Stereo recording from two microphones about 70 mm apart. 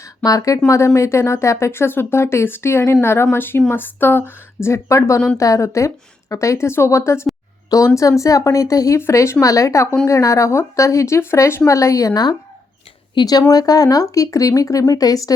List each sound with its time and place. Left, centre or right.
0.2 s speech: left
9.0 s speech: left
9.4 s speech: left